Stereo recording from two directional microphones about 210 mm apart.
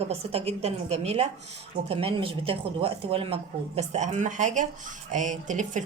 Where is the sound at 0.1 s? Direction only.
30° right (ahead or behind).